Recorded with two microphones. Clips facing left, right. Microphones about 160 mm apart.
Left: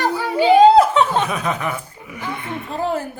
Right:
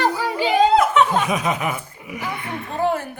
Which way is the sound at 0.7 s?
30° left (ahead or behind).